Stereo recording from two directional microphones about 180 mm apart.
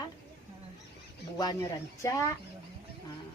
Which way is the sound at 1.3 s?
20° left (ahead or behind).